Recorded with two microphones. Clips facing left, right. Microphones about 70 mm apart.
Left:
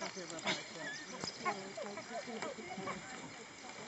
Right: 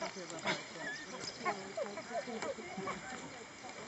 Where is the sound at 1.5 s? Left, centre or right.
Centre.